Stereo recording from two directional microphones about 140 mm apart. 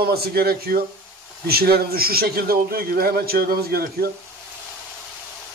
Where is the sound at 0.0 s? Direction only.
90° right.